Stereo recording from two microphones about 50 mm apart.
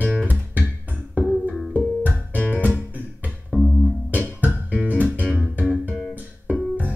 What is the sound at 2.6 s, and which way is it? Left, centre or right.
Music, right.